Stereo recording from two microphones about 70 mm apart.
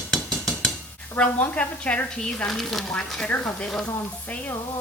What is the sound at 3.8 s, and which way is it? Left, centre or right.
Speech, left.